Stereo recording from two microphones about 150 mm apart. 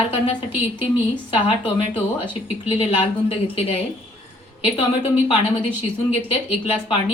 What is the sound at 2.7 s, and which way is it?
A woman's voice, 40° left (ahead or behind).